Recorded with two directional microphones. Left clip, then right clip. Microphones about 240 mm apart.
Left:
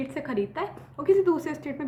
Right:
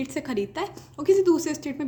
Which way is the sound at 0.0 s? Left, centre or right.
Right.